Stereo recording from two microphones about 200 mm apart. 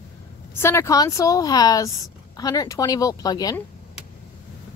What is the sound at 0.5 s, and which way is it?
A woman's voice, 15° left (ahead or behind).